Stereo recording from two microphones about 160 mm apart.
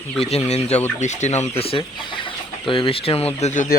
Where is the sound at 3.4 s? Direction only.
50° left (ahead or behind).